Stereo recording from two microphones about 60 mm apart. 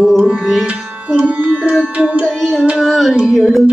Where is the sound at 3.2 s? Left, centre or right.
Centre.